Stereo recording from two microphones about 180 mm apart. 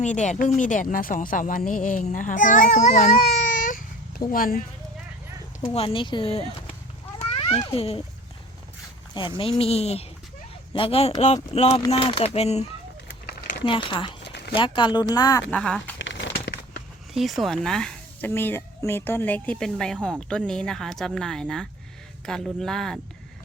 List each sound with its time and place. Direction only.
0.0 s speech: 40° left (ahead or behind)
3.3 s a sound: 45° left (ahead or behind)
4.3 s speech: 50° left (ahead or behind)
5.7 s speech: 30° left (ahead or behind)
7.2 s cat: 30° left (ahead or behind)
9.6 s speech: 35° left (ahead or behind)
14.2 s a sound: 70° left (ahead or behind)
14.5 s speech: 25° left (ahead or behind)
15.5 s a woman's voice: 5° left (ahead or behind)
16.0 s a sound: 90° left
17.2 s a woman's voice: centre (ahead or behind)